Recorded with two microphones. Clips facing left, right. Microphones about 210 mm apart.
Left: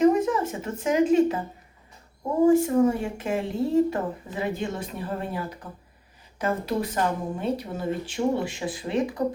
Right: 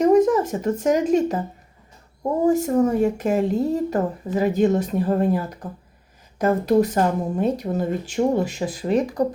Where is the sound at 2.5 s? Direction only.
40° right (ahead or behind).